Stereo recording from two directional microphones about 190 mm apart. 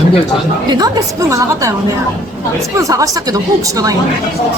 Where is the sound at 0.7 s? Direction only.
20° right (ahead or behind).